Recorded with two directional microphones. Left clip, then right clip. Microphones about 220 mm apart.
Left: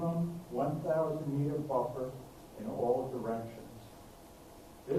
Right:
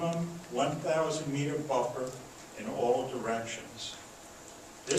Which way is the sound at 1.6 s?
30° right (ahead or behind).